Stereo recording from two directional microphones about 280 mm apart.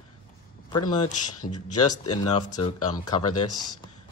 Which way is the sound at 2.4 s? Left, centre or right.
Centre.